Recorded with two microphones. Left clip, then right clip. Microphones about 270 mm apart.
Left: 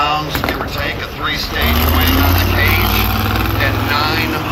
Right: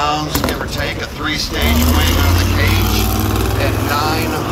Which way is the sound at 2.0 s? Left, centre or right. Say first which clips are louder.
Left 2 dB; centre.